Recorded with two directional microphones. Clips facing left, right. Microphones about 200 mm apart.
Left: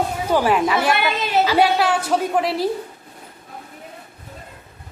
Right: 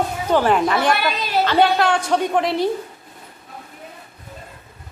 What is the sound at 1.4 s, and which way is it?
A woman's voice, 5° left (ahead or behind).